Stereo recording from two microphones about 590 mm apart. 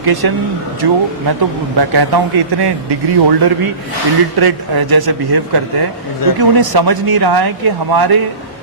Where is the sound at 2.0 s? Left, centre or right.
Right.